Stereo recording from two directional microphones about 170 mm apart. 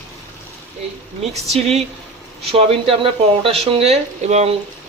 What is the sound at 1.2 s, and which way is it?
Speech, 40° right (ahead or behind).